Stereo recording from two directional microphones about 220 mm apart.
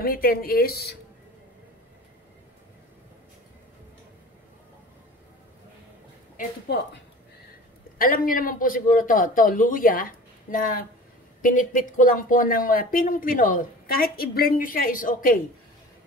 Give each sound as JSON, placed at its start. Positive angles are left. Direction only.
{"t": 0.0, "sound": "speech", "side_deg": 40}
{"t": 6.3, "sound": "speech", "side_deg": 45}
{"t": 8.0, "sound": "speech", "side_deg": 40}